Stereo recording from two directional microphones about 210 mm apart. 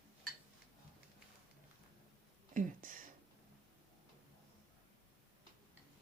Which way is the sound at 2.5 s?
40° right (ahead or behind).